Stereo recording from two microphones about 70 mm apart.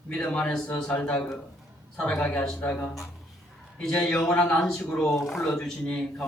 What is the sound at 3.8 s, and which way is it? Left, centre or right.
A man's voice, centre.